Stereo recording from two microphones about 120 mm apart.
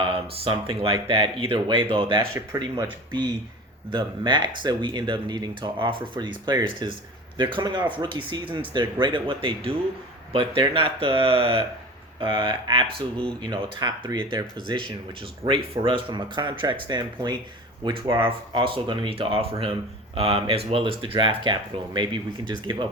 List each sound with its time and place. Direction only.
0.0 s speech: 50° right (ahead or behind)
2.1 s speech: 25° right (ahead or behind)
3.1 s speech: 40° right (ahead or behind)